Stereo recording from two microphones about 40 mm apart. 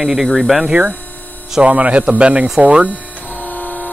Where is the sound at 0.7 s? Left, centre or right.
Right.